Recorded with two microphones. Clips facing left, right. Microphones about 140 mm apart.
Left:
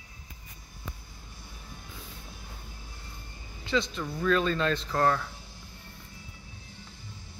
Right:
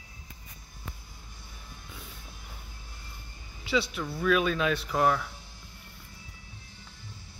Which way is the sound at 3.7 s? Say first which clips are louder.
Even; 10° right (ahead or behind).